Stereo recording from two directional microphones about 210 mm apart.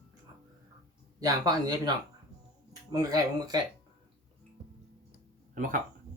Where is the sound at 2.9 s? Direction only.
20° right (ahead or behind).